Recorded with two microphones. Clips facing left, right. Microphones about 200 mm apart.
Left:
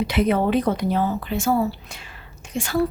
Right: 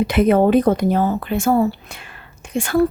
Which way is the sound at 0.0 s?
50° right (ahead or behind).